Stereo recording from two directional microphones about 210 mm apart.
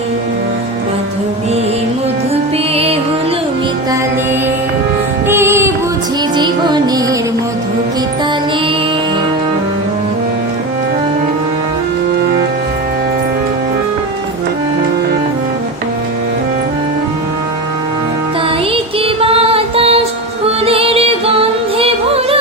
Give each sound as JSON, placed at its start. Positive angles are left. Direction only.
{"t": 2.3, "sound": "music", "side_deg": -30}
{"t": 5.3, "sound": "music", "side_deg": -10}
{"t": 18.7, "sound": "music", "side_deg": -25}